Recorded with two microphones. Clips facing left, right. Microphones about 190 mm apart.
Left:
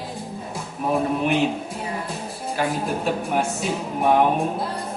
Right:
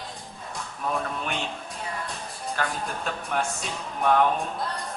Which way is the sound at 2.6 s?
10° left (ahead or behind).